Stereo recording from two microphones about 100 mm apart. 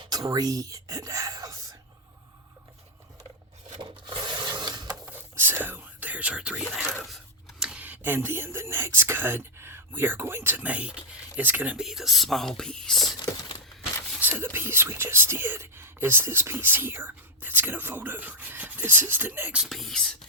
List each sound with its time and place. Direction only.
0.0 s whispering: 40° right (ahead or behind)
3.8 s filing: 45° right (ahead or behind)
5.0 s whispering: 20° right (ahead or behind)
6.7 s speech: centre (ahead or behind)
11.8 s speech: 5° right (ahead or behind)
14.2 s speech: 20° right (ahead or behind)
19.6 s speech: centre (ahead or behind)